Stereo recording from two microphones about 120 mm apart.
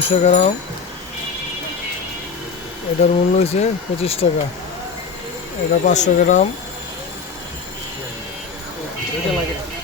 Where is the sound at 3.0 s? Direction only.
60° left (ahead or behind).